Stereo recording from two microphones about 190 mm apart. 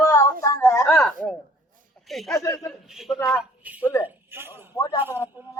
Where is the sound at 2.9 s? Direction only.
Centre (ahead or behind).